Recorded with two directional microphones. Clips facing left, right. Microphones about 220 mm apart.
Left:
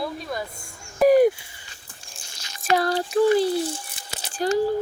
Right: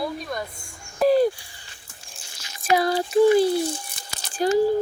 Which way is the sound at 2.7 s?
10° right (ahead or behind).